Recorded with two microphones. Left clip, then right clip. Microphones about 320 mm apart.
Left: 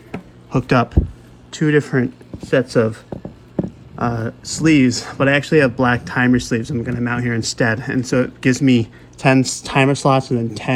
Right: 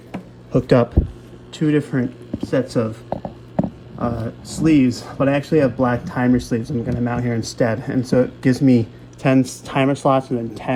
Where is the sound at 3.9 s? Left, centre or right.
Left.